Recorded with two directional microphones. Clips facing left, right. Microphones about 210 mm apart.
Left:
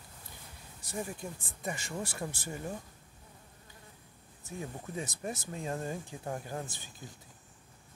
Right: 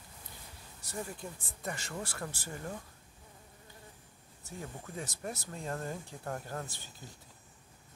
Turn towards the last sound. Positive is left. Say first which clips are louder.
# left 1 dB
turn(degrees=10)  # may be behind; listen again after turning